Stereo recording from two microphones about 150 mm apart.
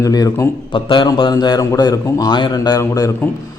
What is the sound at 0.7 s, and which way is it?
A man's voice, 30° left (ahead or behind).